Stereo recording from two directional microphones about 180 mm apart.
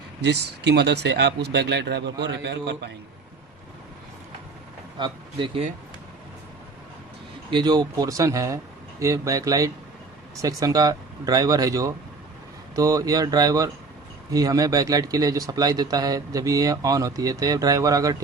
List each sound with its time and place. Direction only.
0.2 s speech: 70° right (ahead or behind)
4.9 s speech: 25° right (ahead or behind)
7.5 s speech: 20° right (ahead or behind)